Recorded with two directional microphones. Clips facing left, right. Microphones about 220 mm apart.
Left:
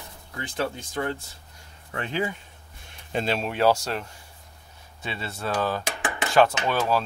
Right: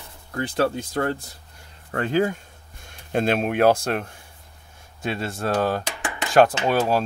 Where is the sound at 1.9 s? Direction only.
45° right (ahead or behind).